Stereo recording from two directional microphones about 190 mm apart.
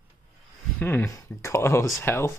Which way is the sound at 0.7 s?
10° left (ahead or behind).